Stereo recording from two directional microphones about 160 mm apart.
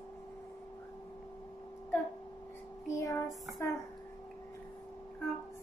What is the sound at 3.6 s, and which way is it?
Speech, 20° left (ahead or behind).